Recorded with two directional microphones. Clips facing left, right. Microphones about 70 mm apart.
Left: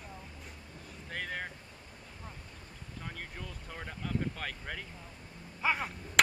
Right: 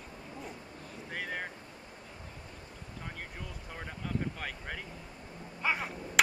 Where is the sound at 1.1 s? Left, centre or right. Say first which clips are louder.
Right 1 dB; centre.